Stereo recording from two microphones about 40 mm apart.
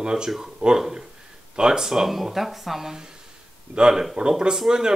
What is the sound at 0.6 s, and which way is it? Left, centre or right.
Speech, right.